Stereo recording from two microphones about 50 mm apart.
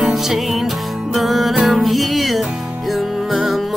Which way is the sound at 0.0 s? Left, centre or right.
Centre.